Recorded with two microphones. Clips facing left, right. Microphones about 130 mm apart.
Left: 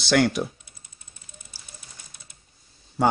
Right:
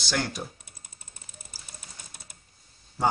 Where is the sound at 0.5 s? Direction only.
45° right (ahead or behind).